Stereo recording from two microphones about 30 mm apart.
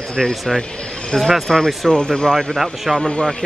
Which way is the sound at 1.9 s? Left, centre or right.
Left.